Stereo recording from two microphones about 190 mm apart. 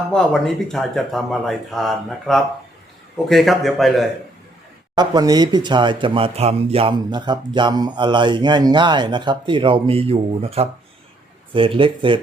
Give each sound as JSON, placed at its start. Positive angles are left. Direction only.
{"t": 0.1, "sound": "speech", "side_deg": 5}
{"t": 4.9, "sound": "speech", "side_deg": -20}